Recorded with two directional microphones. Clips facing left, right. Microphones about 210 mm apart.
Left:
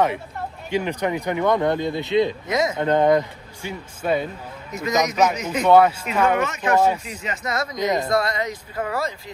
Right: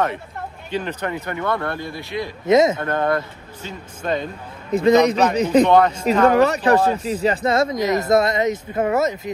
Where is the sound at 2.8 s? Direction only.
15° left (ahead or behind).